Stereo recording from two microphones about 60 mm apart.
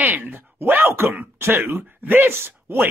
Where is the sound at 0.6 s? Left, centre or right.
Right.